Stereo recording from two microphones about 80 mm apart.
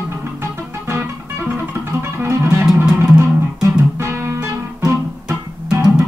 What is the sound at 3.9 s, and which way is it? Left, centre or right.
Music, right.